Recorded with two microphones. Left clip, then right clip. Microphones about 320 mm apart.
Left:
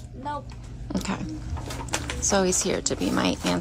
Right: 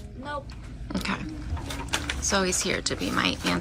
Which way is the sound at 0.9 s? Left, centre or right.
Centre.